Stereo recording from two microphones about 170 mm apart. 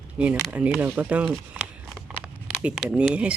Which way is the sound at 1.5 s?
10° right (ahead or behind).